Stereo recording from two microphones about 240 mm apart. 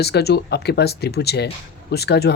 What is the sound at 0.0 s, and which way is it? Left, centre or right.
Speech, left.